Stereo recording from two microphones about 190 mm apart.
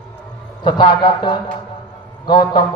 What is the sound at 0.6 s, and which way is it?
A man's voice, 25° left (ahead or behind).